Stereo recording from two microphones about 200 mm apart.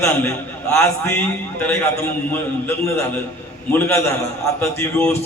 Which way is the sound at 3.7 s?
10° left (ahead or behind).